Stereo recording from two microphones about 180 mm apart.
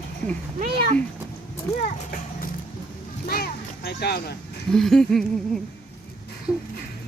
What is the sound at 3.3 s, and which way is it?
Music, 60° left (ahead or behind).